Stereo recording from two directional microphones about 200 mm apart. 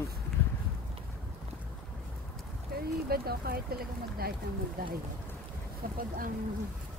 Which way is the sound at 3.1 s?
50° right (ahead or behind).